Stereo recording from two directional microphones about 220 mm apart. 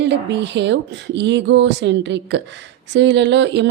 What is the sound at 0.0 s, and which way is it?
Speech, 55° right (ahead or behind).